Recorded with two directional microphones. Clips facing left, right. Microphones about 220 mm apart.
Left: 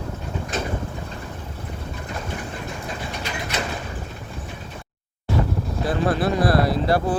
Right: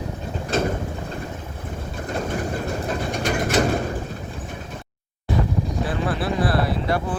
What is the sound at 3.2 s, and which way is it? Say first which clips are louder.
Bird: right 10 dB; 50° right (ahead or behind).